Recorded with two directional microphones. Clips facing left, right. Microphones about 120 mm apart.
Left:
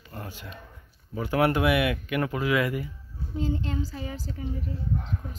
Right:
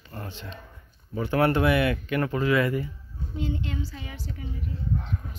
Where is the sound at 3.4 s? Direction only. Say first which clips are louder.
Left 2 dB; 35° left (ahead or behind).